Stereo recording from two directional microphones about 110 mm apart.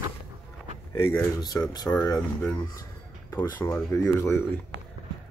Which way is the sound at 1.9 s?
20° left (ahead or behind).